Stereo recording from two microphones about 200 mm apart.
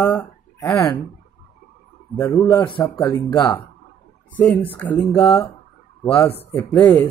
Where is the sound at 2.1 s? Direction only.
15° left (ahead or behind).